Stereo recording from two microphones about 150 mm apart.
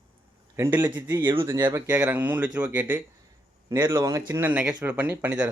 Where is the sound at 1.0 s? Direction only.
30° right (ahead or behind).